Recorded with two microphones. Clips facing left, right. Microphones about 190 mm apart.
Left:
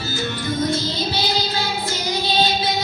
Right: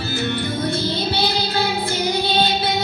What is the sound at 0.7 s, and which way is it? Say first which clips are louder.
Child singing: right 1 dB; 60° right (ahead or behind).